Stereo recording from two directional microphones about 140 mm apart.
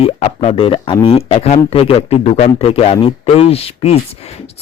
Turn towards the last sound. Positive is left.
turn(degrees=45)  # may be behind; listen again after turning